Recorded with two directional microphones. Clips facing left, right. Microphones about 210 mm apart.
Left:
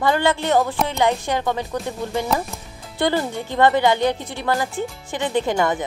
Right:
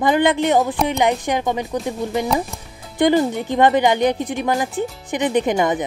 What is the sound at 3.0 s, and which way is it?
Speech, 15° right (ahead or behind).